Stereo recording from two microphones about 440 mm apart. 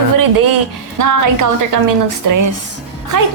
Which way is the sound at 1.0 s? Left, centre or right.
Right.